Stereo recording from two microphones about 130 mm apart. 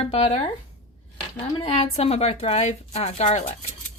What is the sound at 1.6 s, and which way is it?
A woman's voice, 50° left (ahead or behind).